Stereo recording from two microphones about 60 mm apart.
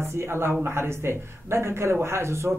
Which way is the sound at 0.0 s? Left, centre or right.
Right.